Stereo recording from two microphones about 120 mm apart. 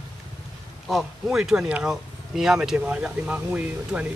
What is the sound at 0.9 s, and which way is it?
Speech, 5° right (ahead or behind).